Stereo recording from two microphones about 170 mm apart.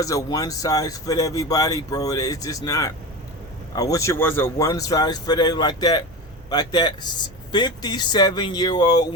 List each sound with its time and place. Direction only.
0.0 s speech: 20° left (ahead or behind)